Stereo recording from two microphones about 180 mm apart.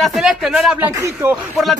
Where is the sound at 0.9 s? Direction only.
15° right (ahead or behind).